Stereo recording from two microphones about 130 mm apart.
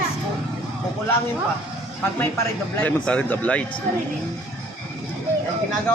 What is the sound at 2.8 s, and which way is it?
Speech, 10° left (ahead or behind).